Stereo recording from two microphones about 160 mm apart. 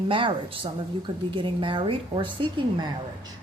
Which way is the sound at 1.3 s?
30° right (ahead or behind).